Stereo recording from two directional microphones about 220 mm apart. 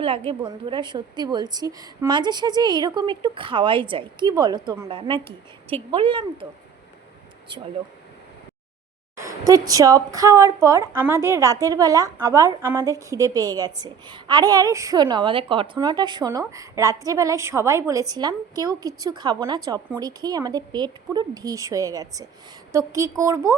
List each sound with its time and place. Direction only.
0.0 s a woman's voice: 25° right (ahead or behind)
9.1 s a woman's voice: 15° right (ahead or behind)